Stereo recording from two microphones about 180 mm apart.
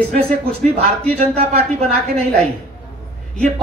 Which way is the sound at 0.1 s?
35° right (ahead or behind).